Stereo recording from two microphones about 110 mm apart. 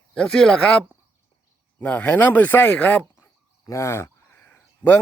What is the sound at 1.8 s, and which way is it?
Speech, 15° left (ahead or behind).